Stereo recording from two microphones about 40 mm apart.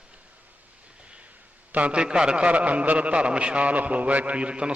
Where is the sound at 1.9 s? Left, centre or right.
Right.